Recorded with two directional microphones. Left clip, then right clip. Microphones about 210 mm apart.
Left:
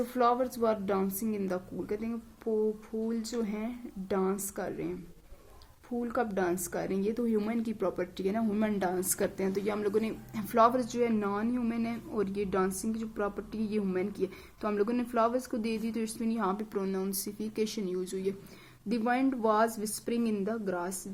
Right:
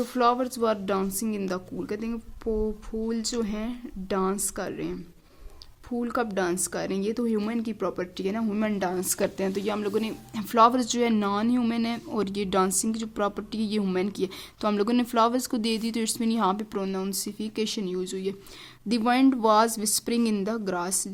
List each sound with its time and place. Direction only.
0.0 s speech: 25° right (ahead or behind)
6.0 s speech: 25° right (ahead or behind)